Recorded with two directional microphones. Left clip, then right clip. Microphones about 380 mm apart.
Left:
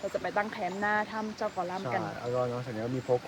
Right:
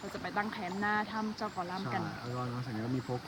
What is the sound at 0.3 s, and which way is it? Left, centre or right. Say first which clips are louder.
Speech: left 4 dB; centre.